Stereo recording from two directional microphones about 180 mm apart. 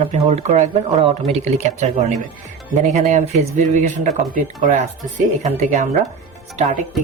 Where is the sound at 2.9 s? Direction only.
45° right (ahead or behind).